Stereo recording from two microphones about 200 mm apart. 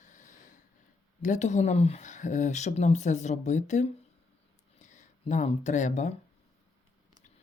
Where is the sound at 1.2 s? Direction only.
35° left (ahead or behind).